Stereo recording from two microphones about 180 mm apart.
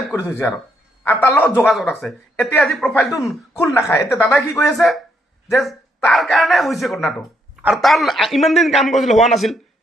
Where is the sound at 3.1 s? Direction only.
15° left (ahead or behind).